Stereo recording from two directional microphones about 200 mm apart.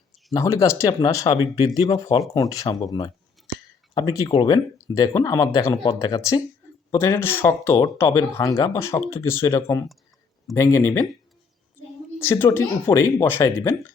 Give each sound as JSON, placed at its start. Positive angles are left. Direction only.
{"t": 0.3, "sound": "speech", "side_deg": 15}
{"t": 12.2, "sound": "speech", "side_deg": 10}